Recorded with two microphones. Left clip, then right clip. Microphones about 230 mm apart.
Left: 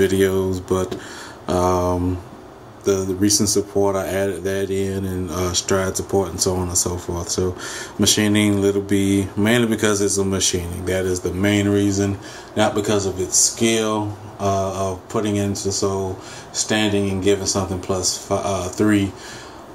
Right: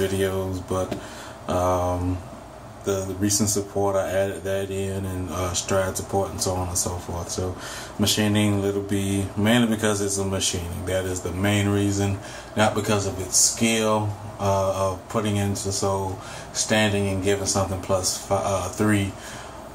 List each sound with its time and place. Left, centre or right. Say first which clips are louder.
0.0 s speech: left 7 dB; left